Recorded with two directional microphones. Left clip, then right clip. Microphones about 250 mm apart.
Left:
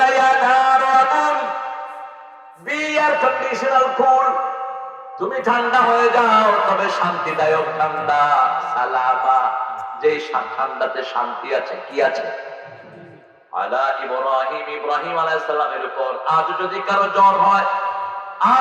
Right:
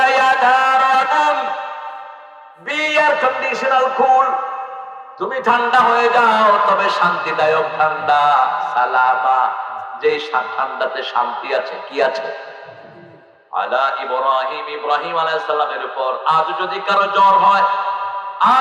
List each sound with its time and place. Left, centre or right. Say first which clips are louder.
0.0 s music: right 1 dB; centre
2.6 s a man's voice: right 3 dB; centre
13.6 s a man's voice: right 2 dB; centre
18.3 s a sound: right 2 dB; centre